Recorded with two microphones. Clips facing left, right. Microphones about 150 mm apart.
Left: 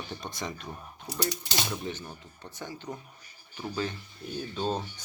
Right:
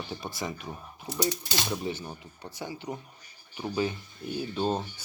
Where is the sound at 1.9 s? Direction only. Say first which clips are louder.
Right 3 dB; 10° right (ahead or behind).